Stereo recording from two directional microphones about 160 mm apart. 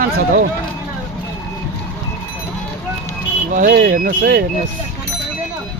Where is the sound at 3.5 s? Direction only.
55° right (ahead or behind).